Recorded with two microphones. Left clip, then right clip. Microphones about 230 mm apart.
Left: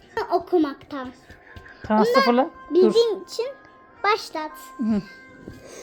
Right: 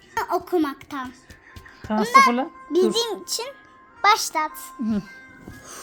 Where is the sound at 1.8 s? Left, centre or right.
Centre.